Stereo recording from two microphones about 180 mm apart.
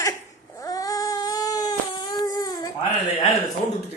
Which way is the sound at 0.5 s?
20° left (ahead or behind).